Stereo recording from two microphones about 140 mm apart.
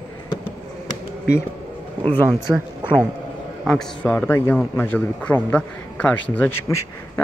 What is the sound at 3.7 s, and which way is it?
A man's voice, 5° left (ahead or behind).